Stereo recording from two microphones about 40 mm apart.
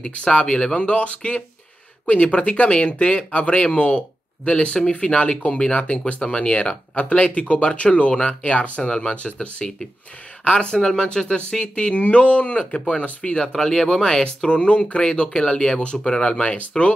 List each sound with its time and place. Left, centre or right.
0.1 s speech: left
8.8 s speech: centre
9.1 s speech: left
10.5 s speech: centre
13.4 s speech: centre
14.2 s speech: left